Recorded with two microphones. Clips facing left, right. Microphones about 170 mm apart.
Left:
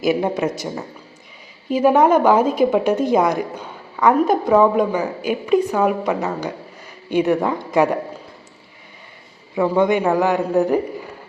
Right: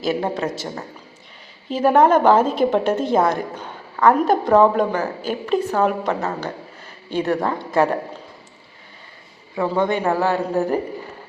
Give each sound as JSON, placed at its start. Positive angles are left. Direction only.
{"t": 0.0, "sound": "a woman's voice", "side_deg": 15}
{"t": 9.6, "sound": "a woman's voice", "side_deg": 15}